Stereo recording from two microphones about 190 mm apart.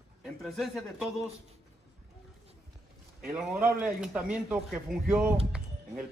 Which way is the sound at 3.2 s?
5° right (ahead or behind).